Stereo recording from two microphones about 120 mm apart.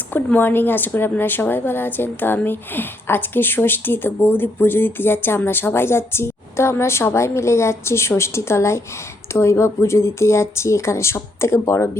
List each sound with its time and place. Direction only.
0.1 s a woman's voice: 15° left (ahead or behind)